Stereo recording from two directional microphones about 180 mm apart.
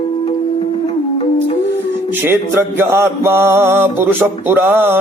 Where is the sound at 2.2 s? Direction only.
15° right (ahead or behind).